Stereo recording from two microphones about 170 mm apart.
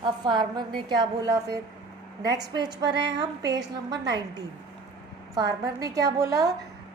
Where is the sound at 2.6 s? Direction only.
90° right.